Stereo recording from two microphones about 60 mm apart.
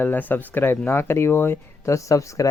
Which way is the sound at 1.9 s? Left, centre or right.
Left.